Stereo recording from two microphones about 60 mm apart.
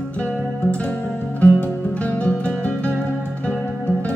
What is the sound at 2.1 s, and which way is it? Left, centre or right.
Music, left.